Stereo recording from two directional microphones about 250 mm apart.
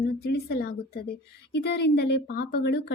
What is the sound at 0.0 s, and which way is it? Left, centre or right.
A woman's voice, left.